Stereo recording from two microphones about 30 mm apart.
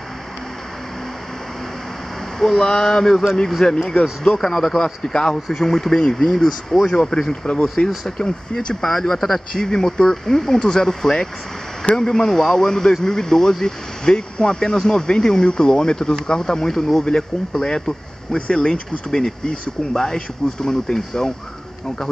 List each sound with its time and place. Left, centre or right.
2.3 s speech: centre
3.6 s speech: left
4.2 s speech: centre
5.5 s speech: centre
8.8 s speech: centre
10.6 s speech: left
17.0 s speech: left